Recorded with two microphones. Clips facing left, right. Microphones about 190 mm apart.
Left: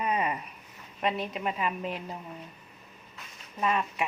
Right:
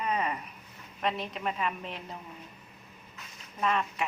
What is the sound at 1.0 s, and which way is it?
Speech, 5° left (ahead or behind).